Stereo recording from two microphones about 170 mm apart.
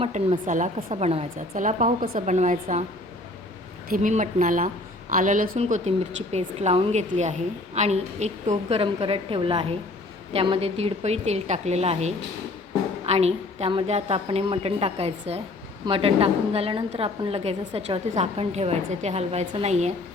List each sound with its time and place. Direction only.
0.0 s a woman's voice: 35° right (ahead or behind)
0.4 s speech: 50° right (ahead or behind)
0.8 s speech: 35° right (ahead or behind)
3.8 s a woman's voice: 50° right (ahead or behind)